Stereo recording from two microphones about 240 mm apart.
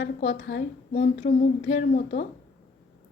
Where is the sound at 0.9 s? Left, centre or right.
Left.